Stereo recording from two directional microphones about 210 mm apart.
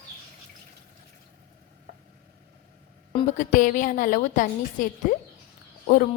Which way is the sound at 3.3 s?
35° left (ahead or behind).